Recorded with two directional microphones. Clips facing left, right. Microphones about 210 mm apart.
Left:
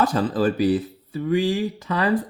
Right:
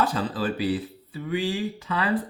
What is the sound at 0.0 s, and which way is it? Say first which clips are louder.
Speech: left 5 dB; 45° left (ahead or behind).